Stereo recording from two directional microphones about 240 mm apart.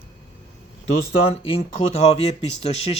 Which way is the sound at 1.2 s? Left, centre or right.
Left.